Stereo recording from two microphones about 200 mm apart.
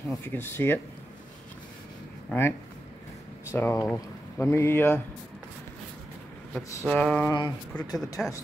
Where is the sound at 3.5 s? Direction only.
10° left (ahead or behind).